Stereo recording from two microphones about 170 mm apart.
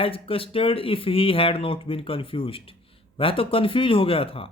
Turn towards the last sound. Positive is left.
turn(degrees=35)  # may be behind; listen again after turning